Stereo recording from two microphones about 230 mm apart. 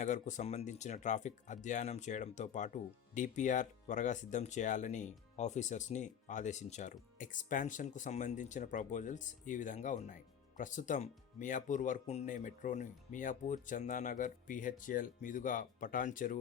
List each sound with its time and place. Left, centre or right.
0.0 s speech: left